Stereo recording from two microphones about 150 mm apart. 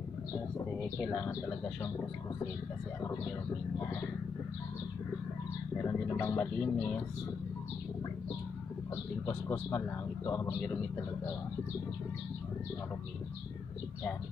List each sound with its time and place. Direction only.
1.2 s speech: 15° left (ahead or behind)
5.9 s speech: 15° left (ahead or behind)
9.2 s speech: 15° left (ahead or behind)